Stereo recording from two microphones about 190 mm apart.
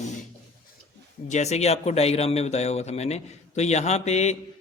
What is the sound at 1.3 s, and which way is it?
A man's voice, 35° left (ahead or behind).